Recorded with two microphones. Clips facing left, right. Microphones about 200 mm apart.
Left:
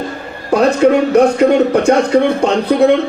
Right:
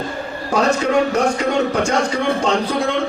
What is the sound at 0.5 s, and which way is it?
A man's voice, 60° left (ahead or behind).